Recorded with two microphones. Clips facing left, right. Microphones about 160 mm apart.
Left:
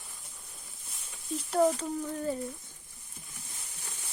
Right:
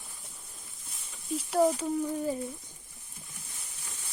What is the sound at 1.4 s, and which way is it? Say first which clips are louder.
Speech: right 1 dB; 5° right (ahead or behind).